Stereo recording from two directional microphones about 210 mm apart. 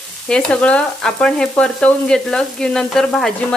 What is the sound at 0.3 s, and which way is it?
Frying, 5° left (ahead or behind).